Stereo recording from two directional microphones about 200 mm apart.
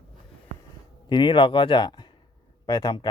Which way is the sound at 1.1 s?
25° left (ahead or behind).